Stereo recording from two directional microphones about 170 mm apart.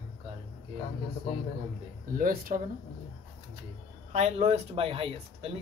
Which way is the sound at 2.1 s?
60° right (ahead or behind).